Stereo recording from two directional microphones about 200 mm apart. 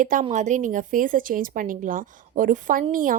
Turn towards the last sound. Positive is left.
turn(degrees=-40)  # may be behind; listen again after turning